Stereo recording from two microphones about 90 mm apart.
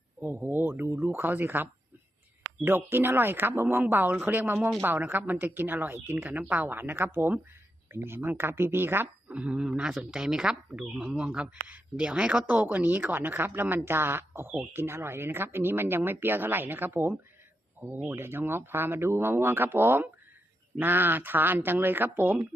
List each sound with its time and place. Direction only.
0.2 s speech: 20° right (ahead or behind)